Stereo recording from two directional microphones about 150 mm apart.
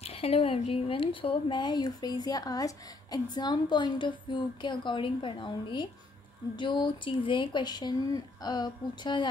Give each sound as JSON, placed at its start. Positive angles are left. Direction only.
{"t": 0.0, "sound": "speech", "side_deg": 40}